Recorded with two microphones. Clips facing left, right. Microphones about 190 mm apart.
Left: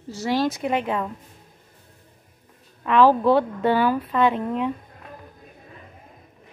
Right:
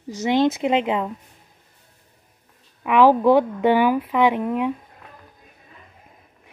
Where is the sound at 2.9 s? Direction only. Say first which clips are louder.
Right 2 dB; 15° right (ahead or behind).